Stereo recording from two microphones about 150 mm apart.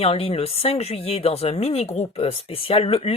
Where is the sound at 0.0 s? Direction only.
40° left (ahead or behind).